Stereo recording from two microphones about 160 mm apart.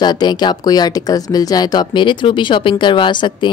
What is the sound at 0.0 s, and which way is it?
A woman's voice, 25° left (ahead or behind).